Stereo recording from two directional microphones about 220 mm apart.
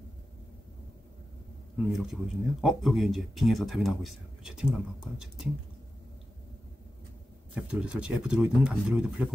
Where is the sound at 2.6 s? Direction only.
Centre (ahead or behind).